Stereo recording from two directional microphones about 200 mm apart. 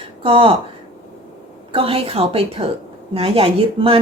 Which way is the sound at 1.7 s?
30° right (ahead or behind).